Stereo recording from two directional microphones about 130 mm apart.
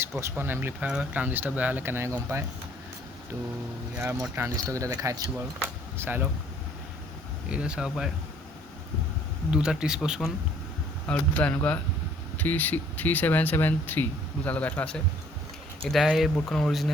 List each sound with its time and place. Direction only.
0.0 s speech: 20° right (ahead or behind)
3.9 s speech: 15° right (ahead or behind)
5.5 s a sound: 15° right (ahead or behind)
7.5 s speech: 5° right (ahead or behind)
9.5 s speech: 5° right (ahead or behind)
11.1 s speech: 10° left (ahead or behind)